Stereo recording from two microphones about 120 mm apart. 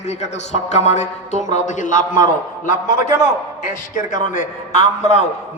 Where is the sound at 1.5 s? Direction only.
90° left.